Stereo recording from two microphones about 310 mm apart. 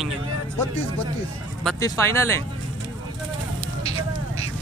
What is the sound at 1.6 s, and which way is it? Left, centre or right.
Speech, centre.